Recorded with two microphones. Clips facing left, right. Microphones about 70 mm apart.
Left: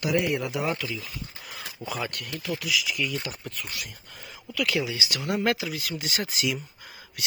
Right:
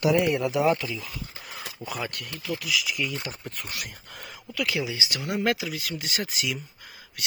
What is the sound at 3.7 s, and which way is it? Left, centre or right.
Speech, right.